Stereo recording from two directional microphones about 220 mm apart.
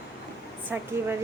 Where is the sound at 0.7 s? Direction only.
10° right (ahead or behind).